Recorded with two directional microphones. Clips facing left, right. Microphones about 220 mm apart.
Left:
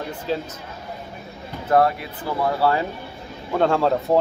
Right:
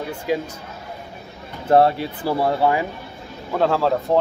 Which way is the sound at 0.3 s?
10° right (ahead or behind).